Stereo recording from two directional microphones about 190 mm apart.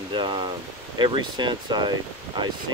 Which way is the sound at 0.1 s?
25° right (ahead or behind).